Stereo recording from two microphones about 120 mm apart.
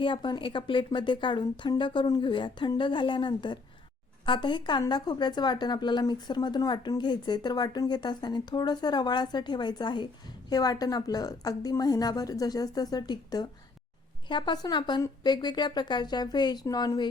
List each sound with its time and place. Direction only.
0.0 s a woman's voice: 40° left (ahead or behind)